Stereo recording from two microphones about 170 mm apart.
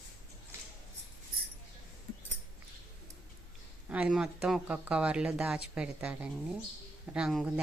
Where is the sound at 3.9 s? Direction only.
5° right (ahead or behind).